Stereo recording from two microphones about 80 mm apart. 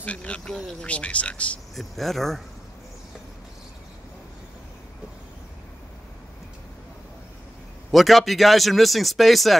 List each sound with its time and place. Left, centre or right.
0.0 s speech: centre
1.8 s speech: centre
7.9 s speech: centre